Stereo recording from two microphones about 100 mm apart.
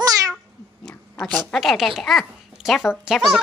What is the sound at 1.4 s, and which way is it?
Speech, centre (ahead or behind).